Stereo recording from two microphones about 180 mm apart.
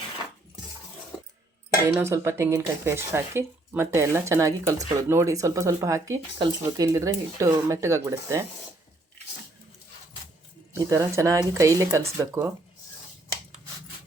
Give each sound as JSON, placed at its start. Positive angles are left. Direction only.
{"t": 1.9, "sound": "speech", "side_deg": -15}
{"t": 10.8, "sound": "speech", "side_deg": -15}